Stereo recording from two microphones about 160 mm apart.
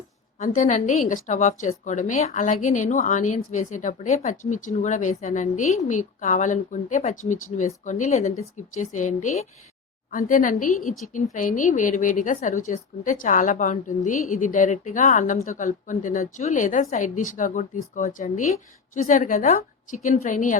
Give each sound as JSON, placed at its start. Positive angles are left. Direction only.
{"t": 0.3, "sound": "a woman's voice", "side_deg": 50}
{"t": 10.1, "sound": "a woman's voice", "side_deg": 60}